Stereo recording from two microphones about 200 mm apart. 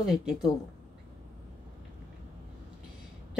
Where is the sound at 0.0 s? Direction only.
Centre (ahead or behind).